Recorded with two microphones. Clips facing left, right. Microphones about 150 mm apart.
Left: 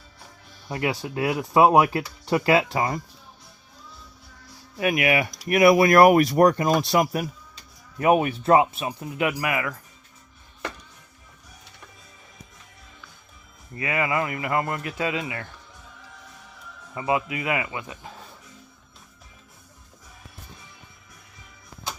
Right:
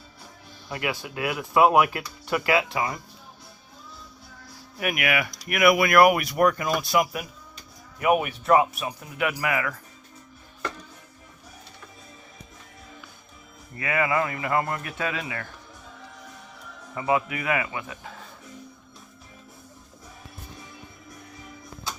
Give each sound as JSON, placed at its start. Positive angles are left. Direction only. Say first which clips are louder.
{"t": 0.7, "sound": "speech", "louder": "left 3 dB", "side_deg": 30}
{"t": 4.8, "sound": "speech", "louder": "left 4 dB", "side_deg": 30}
{"t": 13.7, "sound": "speech", "louder": "right 1 dB", "side_deg": 20}
{"t": 16.9, "sound": "speech", "louder": "even", "side_deg": 25}